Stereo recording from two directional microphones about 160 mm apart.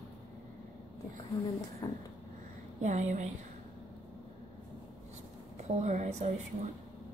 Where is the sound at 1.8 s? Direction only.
25° left (ahead or behind).